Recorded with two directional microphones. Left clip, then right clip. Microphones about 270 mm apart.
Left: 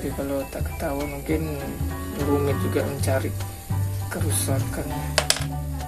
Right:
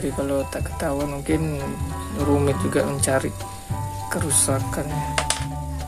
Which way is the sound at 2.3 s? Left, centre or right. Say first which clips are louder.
Right 3 dB; right.